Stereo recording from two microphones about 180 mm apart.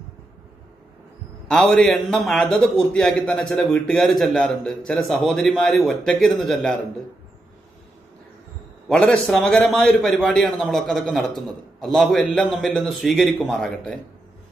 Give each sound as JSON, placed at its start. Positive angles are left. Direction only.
{"t": 1.5, "sound": "a man's voice", "side_deg": 5}
{"t": 8.8, "sound": "a man's voice", "side_deg": 5}